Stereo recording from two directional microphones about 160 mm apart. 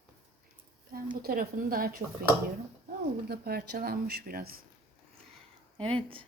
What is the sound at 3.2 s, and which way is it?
Speech, 75° right (ahead or behind).